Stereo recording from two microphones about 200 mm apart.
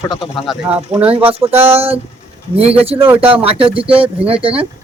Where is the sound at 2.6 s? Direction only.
30° right (ahead or behind).